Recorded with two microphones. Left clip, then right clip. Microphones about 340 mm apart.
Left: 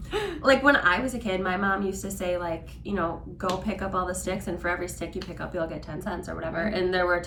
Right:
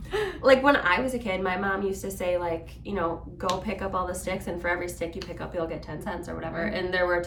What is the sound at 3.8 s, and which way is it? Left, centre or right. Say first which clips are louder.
Speech: even; right.